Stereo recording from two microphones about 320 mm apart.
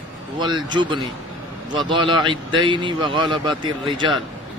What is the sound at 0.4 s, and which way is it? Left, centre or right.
Speech, centre.